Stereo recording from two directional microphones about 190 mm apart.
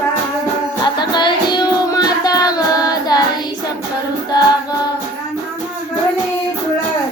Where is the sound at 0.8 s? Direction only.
25° left (ahead or behind).